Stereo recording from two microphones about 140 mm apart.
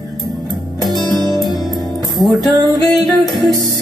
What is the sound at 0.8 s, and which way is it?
Music, centre (ahead or behind).